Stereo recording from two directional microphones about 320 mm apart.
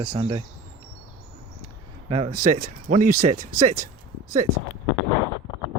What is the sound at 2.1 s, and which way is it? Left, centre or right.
Speech, centre.